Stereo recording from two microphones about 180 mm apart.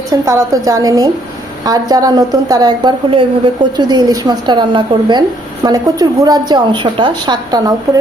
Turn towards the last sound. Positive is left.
turn(degrees=-20)  # may be behind; listen again after turning